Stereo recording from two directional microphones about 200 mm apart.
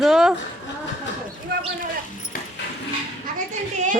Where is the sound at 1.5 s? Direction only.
55° right (ahead or behind).